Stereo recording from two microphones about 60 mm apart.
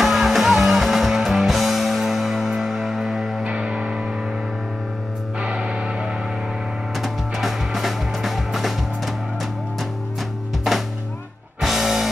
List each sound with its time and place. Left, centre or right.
0.0 s music: centre
3.4 s music: centre
5.4 s music: centre
7.0 s music: centre
11.6 s music: centre